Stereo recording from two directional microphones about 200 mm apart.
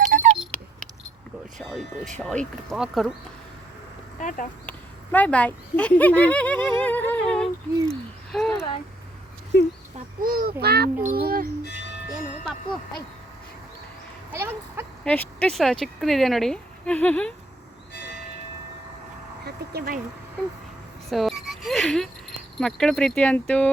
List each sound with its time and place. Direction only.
0.0 s a sound: 40° right (ahead or behind)
0.3 s a sound: 5° left (ahead or behind)
1.5 s speech: centre (ahead or behind)
4.2 s speech: 40° left (ahead or behind)
5.1 s speech: 5° left (ahead or behind)
9.5 s speech: 55° left (ahead or behind)
10.2 s a child's voice: 45° right (ahead or behind)
14.3 s speech: 10° right (ahead or behind)
15.0 s speech: 5° left (ahead or behind)
19.5 s speech: 50° right (ahead or behind)
21.1 s a sound: centre (ahead or behind)